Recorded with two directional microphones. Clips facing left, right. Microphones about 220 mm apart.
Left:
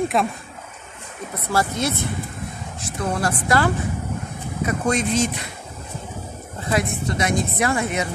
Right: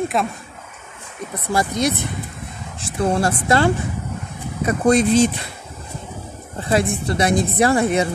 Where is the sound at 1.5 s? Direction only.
15° right (ahead or behind).